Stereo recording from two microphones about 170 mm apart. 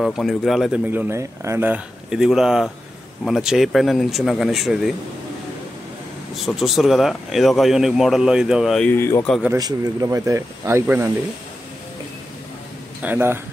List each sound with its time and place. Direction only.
0.0 s speech: centre (ahead or behind)
0.8 s speech: 10° right (ahead or behind)
6.3 s speech: centre (ahead or behind)
9.6 s speech: 25° right (ahead or behind)
13.0 s speech: 10° right (ahead or behind)